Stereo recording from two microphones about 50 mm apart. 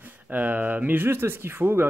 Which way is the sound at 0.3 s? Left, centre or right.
Right.